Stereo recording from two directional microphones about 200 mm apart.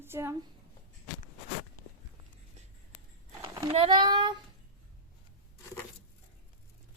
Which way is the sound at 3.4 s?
15° right (ahead or behind).